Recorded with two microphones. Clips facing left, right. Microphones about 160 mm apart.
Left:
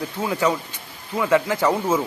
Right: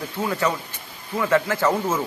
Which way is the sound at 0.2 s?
10° left (ahead or behind).